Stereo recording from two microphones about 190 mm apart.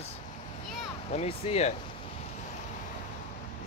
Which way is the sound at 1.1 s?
35° left (ahead or behind).